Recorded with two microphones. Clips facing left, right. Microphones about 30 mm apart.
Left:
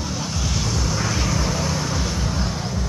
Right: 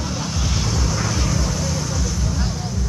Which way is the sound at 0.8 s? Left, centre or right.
Centre.